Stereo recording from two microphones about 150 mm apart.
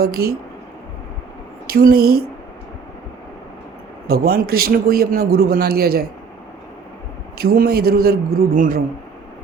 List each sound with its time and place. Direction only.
0.0 s a man's voice: 90° right
1.6 s speech: 85° right
4.0 s a man's voice: 90° right
7.3 s a man's voice: 90° right; by 8.8 s 65° right (ahead or behind)